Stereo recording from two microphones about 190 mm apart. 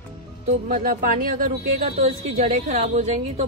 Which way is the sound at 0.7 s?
45° right (ahead or behind).